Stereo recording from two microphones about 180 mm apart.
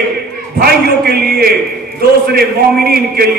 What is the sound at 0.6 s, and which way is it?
A man's voice, 60° right (ahead or behind).